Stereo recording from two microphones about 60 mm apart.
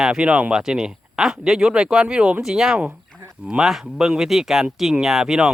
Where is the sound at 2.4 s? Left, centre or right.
Centre.